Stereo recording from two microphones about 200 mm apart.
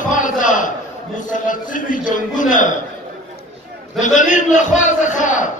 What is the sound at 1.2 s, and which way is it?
A man's voice, 40° left (ahead or behind).